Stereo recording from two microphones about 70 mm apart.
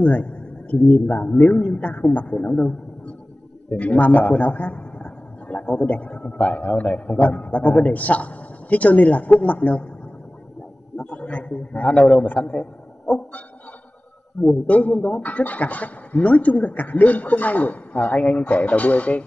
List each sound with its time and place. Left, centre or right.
0.0 s a man's voice: left
3.7 s a man's voice: left
11.0 s a man's voice: centre
14.7 s a man's voice: left